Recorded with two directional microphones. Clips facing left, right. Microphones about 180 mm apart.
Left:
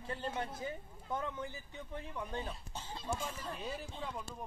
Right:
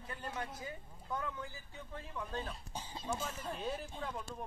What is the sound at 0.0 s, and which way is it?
Speech, 30° left (ahead or behind).